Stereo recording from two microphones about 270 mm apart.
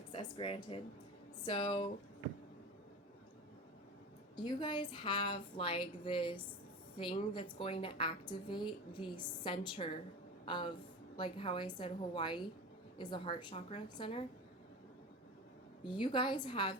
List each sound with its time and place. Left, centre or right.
0.1 s a woman's voice: centre
4.4 s a woman's voice: centre
15.9 s a woman's voice: centre